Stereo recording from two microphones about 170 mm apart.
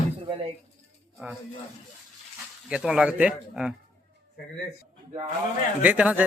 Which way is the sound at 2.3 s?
5° right (ahead or behind).